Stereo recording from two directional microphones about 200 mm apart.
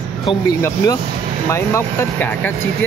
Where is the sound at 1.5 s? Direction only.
15° left (ahead or behind).